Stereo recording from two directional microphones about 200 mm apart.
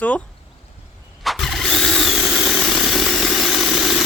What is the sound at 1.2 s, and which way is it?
Power tool, centre (ahead or behind).